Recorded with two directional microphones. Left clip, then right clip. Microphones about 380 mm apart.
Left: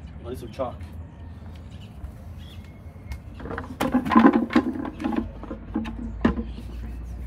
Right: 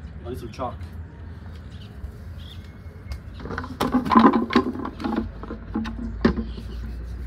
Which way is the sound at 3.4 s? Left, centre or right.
Centre.